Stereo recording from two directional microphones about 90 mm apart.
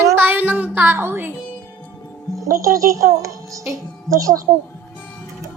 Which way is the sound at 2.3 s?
35° right (ahead or behind).